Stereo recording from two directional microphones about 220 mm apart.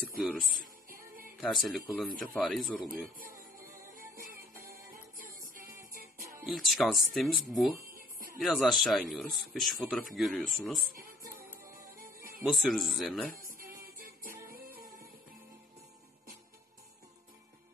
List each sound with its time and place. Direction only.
0.2 s speech: 5° right (ahead or behind)
0.6 s music: 40° right (ahead or behind)
1.4 s speech: centre (ahead or behind)
3.9 s music: 40° right (ahead or behind)
6.4 s speech: centre (ahead or behind)
10.8 s music: 40° right (ahead or behind)
12.4 s speech: centre (ahead or behind)
13.4 s music: 40° right (ahead or behind)